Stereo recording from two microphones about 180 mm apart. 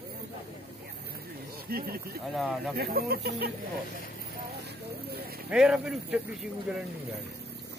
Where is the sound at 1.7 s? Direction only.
55° right (ahead or behind).